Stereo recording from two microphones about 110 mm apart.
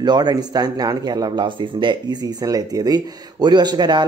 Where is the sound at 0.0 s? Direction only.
40° right (ahead or behind).